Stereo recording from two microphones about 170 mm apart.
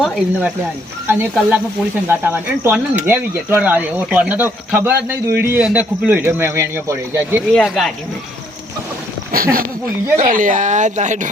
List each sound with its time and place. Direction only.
0.0 s speech: centre (ahead or behind)
1.0 s speech: 10° right (ahead or behind)
7.5 s speech: centre (ahead or behind)
9.3 s a sound: 60° right (ahead or behind)
10.2 s speech: 50° right (ahead or behind)